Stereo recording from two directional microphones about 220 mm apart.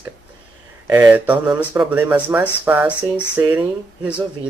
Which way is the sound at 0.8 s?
5° right (ahead or behind).